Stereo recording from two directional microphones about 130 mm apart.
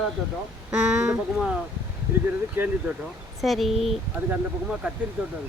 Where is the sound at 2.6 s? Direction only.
15° right (ahead or behind).